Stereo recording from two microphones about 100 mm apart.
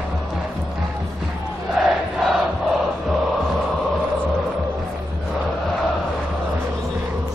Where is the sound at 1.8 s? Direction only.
Centre (ahead or behind).